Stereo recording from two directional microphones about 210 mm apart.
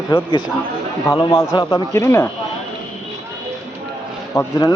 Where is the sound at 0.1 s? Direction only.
25° left (ahead or behind).